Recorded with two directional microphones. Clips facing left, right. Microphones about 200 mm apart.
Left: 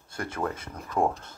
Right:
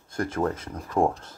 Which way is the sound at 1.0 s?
10° right (ahead or behind).